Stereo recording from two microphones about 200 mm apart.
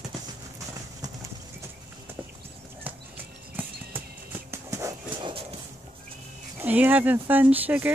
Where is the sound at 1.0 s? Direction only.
20° right (ahead or behind).